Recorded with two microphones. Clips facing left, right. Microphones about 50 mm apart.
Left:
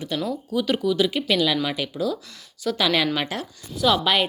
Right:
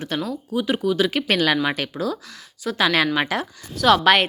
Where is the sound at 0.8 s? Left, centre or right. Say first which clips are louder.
Right 1 dB; right.